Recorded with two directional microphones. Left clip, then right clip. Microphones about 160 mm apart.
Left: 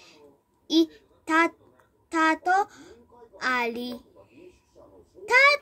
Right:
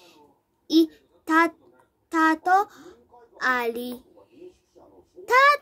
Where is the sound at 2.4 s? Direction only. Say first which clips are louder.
Right 3 dB; 30° right (ahead or behind).